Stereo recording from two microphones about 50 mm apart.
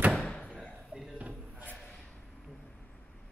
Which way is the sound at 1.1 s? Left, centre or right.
Right.